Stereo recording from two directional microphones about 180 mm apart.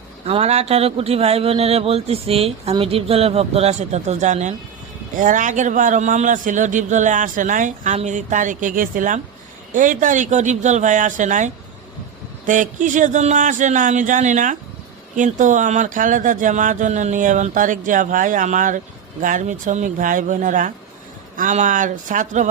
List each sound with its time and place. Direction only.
0.3 s a man's voice: 35° right (ahead or behind)